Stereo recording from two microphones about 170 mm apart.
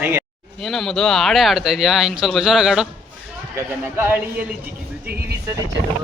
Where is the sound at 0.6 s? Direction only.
Centre (ahead or behind).